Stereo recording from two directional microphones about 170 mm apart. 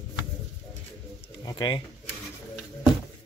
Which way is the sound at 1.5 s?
25° left (ahead or behind).